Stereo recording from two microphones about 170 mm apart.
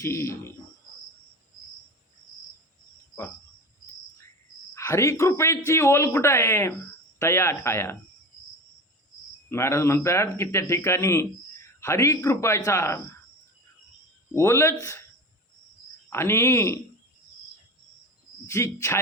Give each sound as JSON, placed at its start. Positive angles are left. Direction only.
{"t": 0.0, "sound": "speech", "side_deg": 15}
{"t": 4.7, "sound": "speech", "side_deg": 15}
{"t": 9.5, "sound": "speech", "side_deg": 15}
{"t": 14.3, "sound": "speech", "side_deg": 15}
{"t": 16.0, "sound": "speech", "side_deg": 15}
{"t": 18.4, "sound": "speech", "side_deg": 15}